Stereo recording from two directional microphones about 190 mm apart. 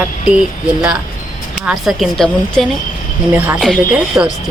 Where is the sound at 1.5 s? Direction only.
5° right (ahead or behind).